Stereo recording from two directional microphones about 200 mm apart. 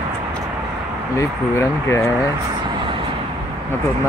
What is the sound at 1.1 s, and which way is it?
Speech, 15° left (ahead or behind).